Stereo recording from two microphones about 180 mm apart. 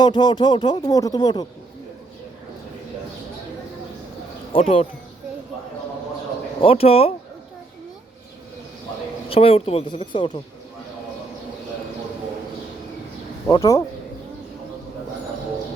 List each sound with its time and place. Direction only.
0.0 s speech: 25° left (ahead or behind)
4.5 s speech: 35° left (ahead or behind)
6.6 s speech: 30° left (ahead or behind)
9.3 s speech: 30° left (ahead or behind)
13.5 s speech: 20° left (ahead or behind)